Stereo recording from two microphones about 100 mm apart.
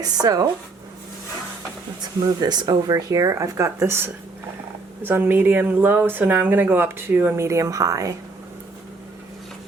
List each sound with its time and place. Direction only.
0.0 s speech: 40° right (ahead or behind)
2.4 s speech: 45° right (ahead or behind)